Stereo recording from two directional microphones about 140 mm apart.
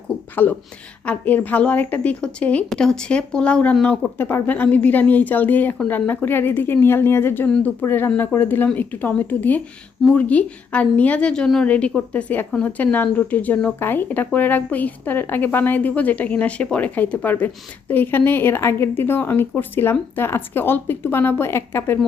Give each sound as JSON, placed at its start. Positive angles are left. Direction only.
{"t": 0.4, "sound": "a woman's voice", "side_deg": 10}